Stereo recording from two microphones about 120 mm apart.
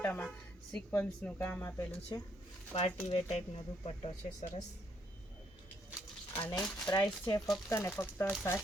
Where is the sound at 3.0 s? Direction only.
60° left (ahead or behind).